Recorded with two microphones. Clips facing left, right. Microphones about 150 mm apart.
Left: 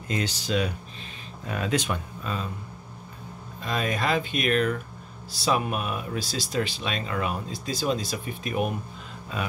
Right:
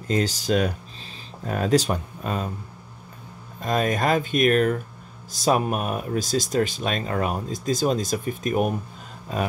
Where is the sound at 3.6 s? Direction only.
45° right (ahead or behind).